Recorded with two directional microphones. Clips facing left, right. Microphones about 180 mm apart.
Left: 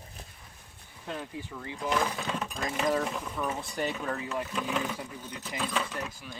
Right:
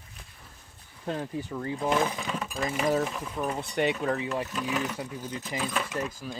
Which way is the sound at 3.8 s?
70° right (ahead or behind).